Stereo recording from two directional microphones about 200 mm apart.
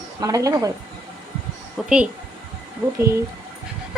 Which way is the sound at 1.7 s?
5° right (ahead or behind).